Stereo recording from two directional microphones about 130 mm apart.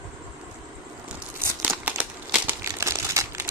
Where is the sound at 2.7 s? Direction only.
20° right (ahead or behind).